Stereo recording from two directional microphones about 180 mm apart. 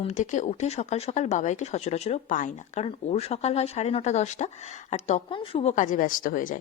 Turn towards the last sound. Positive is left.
turn(degrees=50)  # may be behind; listen again after turning